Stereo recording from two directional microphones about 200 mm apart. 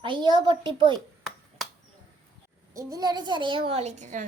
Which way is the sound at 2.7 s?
15° right (ahead or behind).